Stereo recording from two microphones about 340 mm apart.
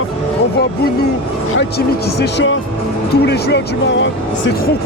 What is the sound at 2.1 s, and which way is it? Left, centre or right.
Speech, left.